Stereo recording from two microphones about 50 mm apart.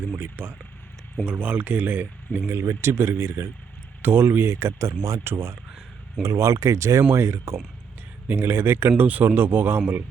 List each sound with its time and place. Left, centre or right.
0.4 s speech: right
1.2 s speech: right
2.5 s speech: right
5.2 s speech: right
6.2 s speech: right
7.1 s speech: right
8.3 s speech: right
9.0 s speech: right